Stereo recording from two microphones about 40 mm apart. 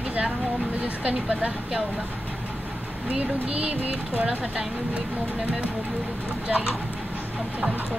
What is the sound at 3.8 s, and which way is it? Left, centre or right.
Speech, right.